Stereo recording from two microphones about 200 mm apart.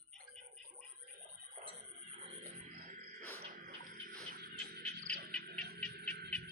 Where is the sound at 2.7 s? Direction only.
40° right (ahead or behind).